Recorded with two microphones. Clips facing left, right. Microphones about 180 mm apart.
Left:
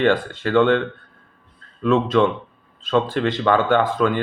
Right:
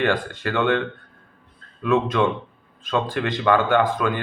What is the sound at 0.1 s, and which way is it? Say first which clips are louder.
Speech: left 5 dB; 15° right (ahead or behind).